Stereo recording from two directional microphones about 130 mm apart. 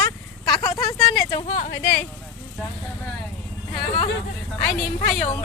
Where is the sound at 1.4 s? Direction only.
65° left (ahead or behind).